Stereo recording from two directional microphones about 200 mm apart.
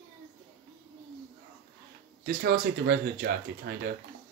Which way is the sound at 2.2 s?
50° right (ahead or behind).